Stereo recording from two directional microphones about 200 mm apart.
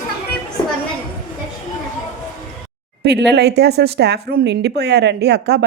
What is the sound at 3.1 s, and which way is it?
Speech, 55° right (ahead or behind).